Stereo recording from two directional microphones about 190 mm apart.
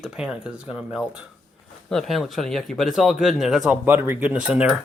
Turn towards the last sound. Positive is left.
turn(degrees=-5)  # may be behind; listen again after turning